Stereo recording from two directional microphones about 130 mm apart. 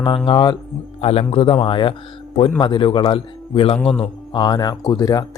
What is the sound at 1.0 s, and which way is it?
A man's voice, 50° left (ahead or behind).